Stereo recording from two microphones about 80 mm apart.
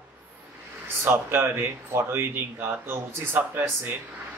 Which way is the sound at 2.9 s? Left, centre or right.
Right.